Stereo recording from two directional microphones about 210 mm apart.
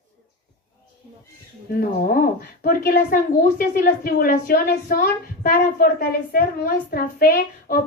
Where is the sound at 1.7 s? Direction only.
45° left (ahead or behind).